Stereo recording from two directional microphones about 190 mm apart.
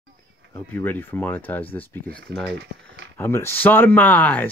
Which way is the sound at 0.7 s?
10° left (ahead or behind).